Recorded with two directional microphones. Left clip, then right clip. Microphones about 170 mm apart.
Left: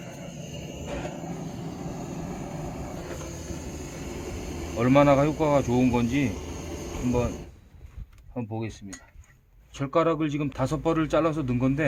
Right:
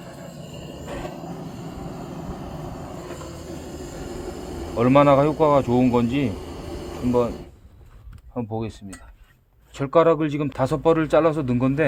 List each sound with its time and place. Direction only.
0.0 s train: 5° right (ahead or behind)
4.8 s speech: 25° right (ahead or behind)
6.3 s a sound: centre (ahead or behind)
8.4 s speech: 25° right (ahead or behind)
9.7 s speech: 40° right (ahead or behind)